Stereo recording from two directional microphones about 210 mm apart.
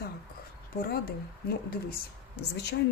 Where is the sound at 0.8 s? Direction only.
45° left (ahead or behind).